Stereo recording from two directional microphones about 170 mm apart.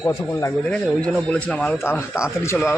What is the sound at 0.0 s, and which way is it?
Speech, 20° left (ahead or behind).